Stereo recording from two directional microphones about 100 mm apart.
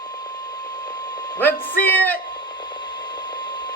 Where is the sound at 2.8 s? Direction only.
45° left (ahead or behind).